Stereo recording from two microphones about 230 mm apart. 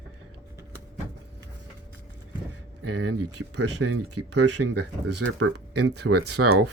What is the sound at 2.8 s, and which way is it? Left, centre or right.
Speech, right.